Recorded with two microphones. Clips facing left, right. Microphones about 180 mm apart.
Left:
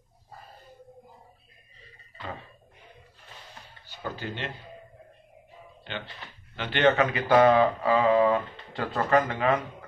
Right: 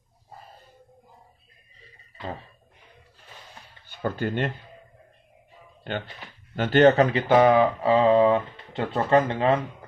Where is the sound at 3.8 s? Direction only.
55° right (ahead or behind).